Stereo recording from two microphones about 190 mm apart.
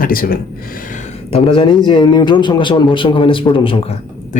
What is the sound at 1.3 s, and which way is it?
A man's voice, 25° left (ahead or behind).